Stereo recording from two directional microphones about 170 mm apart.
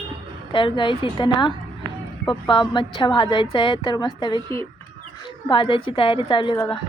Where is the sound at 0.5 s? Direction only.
30° left (ahead or behind).